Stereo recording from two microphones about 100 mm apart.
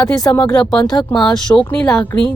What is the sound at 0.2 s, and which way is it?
Speech, 40° left (ahead or behind).